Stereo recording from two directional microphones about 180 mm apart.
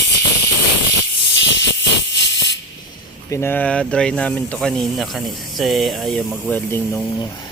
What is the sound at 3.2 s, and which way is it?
Speech, 15° left (ahead or behind).